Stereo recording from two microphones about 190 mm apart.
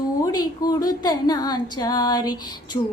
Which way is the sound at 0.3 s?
20° left (ahead or behind).